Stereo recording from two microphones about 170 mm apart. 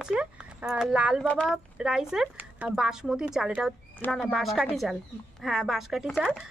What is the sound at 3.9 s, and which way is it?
Speech, 10° left (ahead or behind).